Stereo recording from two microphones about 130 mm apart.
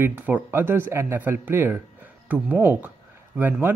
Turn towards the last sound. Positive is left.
turn(degrees=-15)  # may be behind; listen again after turning